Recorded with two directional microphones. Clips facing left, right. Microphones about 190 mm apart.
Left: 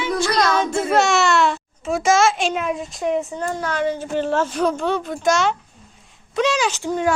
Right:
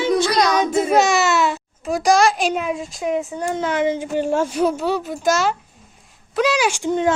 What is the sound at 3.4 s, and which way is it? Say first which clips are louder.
Speech: right 2 dB; 20° right (ahead or behind).